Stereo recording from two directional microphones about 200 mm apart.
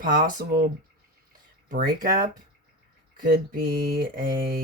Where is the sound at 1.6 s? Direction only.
45° right (ahead or behind).